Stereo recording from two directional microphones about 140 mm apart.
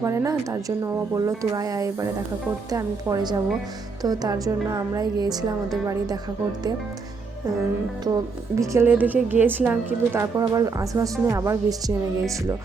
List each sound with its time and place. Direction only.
0.0 s a woman's voice: 20° right (ahead or behind)
8.5 s a woman's voice: 20° right (ahead or behind)